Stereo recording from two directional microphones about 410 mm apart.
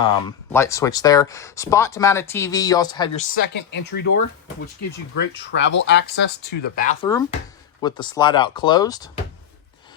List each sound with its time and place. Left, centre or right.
0.0 s speech: centre
4.0 s speech: left
5.1 s speech: left; by 9.0 s centre